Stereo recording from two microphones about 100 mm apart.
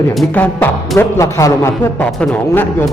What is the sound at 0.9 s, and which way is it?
Speech, 30° left (ahead or behind).